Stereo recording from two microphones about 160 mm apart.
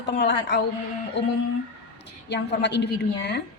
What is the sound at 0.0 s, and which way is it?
Speech, 90° left.